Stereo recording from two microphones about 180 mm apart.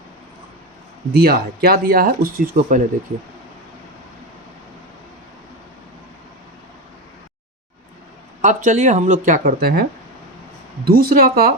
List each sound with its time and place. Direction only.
1.1 s speech: 60° right (ahead or behind)
8.4 s speech: 45° right (ahead or behind); by 9.8 s 60° right (ahead or behind)
10.8 s speech: 55° right (ahead or behind)